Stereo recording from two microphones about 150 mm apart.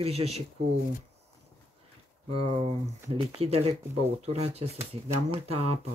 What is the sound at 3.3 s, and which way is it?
Speech, 40° right (ahead or behind).